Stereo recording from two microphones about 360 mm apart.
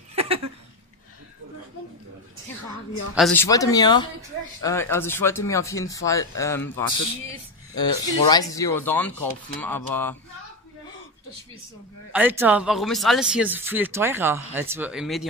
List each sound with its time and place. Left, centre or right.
0.1 s a sound: centre
3.2 s speech: centre
12.1 s speech: centre